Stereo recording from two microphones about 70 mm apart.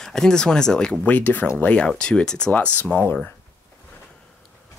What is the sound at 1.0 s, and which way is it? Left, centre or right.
Speech, left.